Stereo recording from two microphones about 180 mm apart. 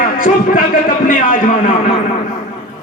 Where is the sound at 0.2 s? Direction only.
50° left (ahead or behind).